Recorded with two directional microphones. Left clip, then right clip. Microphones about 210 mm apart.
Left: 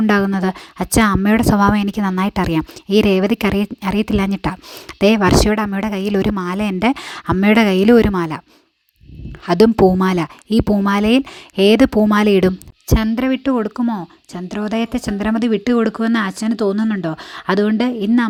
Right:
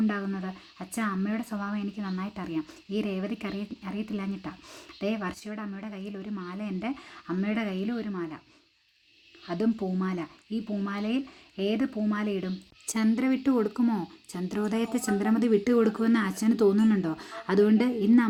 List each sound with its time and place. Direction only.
0.1 s a woman's voice: 50° left (ahead or behind)
9.5 s speech: 50° left (ahead or behind)